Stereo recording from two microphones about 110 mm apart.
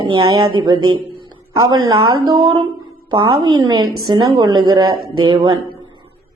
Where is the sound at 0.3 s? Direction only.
45° right (ahead or behind).